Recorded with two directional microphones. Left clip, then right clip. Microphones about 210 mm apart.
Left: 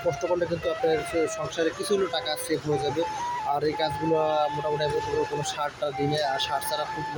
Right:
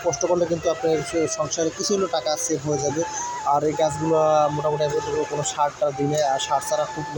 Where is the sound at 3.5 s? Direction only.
10° right (ahead or behind).